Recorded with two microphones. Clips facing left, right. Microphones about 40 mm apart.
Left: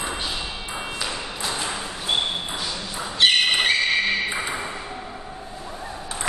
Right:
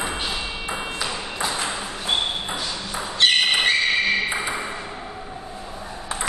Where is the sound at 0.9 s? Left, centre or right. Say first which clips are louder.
Right 2 dB; centre.